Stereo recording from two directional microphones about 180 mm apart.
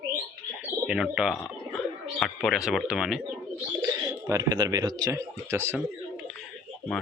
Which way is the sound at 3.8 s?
20° right (ahead or behind).